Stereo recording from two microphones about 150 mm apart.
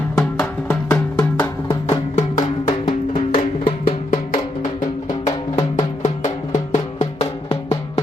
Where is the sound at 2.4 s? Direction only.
30° left (ahead or behind).